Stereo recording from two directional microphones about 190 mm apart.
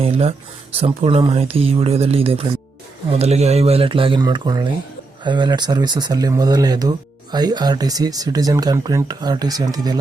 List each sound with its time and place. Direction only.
0.0 s speech: 30° right (ahead or behind)